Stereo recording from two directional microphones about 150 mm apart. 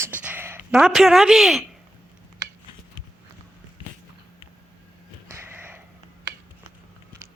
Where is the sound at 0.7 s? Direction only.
Centre (ahead or behind).